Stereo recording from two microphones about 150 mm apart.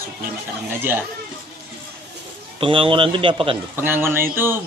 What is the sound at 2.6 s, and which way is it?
Speech, 35° right (ahead or behind).